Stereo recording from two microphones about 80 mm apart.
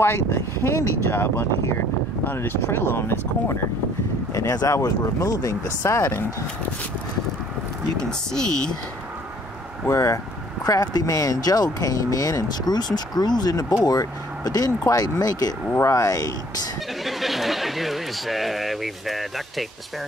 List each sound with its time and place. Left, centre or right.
0.0 s speech: left
4.3 s speech: left
5.8 s speech: left
8.0 s speech: centre
9.8 s speech: left
17.0 s speech: centre